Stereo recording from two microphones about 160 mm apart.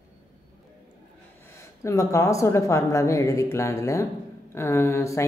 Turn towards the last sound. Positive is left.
turn(degrees=20)  # may be behind; listen again after turning